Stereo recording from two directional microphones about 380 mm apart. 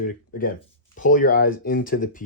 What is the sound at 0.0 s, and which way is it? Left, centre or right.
Speech, left.